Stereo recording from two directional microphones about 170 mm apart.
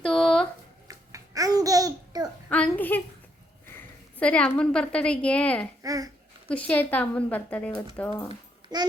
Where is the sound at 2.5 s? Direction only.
10° left (ahead or behind).